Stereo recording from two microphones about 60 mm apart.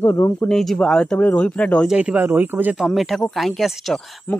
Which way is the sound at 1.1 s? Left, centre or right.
Left.